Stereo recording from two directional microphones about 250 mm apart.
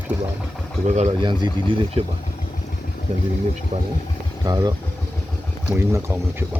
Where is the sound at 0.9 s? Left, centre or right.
Right.